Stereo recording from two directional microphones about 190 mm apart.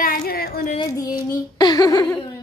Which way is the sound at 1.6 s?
20° left (ahead or behind).